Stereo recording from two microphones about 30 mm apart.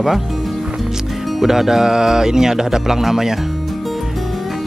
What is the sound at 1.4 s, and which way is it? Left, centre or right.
Speech, centre.